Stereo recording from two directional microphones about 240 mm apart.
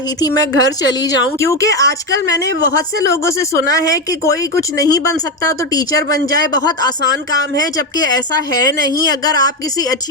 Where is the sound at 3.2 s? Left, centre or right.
Centre.